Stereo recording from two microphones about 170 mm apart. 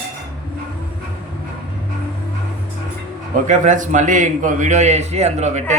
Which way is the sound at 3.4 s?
45° right (ahead or behind).